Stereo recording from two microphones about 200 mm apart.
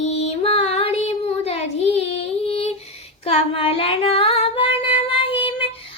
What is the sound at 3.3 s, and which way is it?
Female singing, 30° left (ahead or behind).